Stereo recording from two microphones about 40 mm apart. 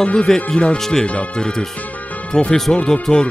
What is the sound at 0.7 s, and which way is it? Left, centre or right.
Speech, centre.